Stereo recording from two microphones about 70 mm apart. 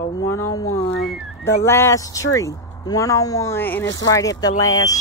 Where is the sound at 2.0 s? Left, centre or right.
Left.